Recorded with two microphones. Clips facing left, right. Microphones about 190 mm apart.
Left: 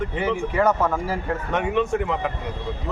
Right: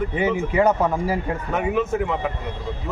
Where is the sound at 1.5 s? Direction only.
5° right (ahead or behind).